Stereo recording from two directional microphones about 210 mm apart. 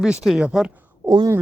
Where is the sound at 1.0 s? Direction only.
15° right (ahead or behind).